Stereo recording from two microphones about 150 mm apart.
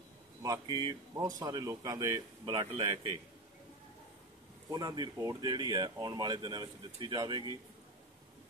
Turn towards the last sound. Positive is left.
turn(degrees=-30)  # may be behind; listen again after turning